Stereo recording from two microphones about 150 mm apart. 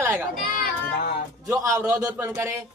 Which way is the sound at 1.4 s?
20° right (ahead or behind).